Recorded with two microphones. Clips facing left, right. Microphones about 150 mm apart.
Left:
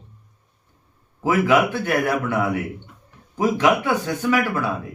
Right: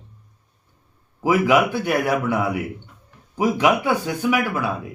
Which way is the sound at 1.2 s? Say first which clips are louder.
Right 1 dB; 10° right (ahead or behind).